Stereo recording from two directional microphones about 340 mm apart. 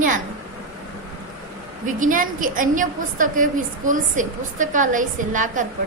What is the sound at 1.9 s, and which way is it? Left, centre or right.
A woman's voice, right.